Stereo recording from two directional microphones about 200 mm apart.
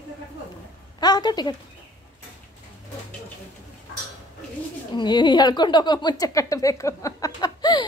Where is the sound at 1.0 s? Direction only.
20° left (ahead or behind).